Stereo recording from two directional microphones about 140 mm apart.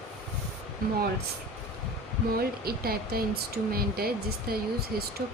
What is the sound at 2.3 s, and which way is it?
Speech, 90° right.